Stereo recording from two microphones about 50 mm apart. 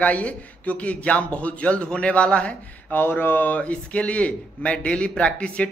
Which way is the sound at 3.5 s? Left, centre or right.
Left.